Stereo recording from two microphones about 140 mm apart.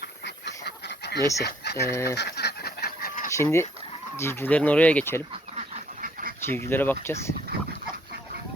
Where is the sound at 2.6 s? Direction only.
90° left.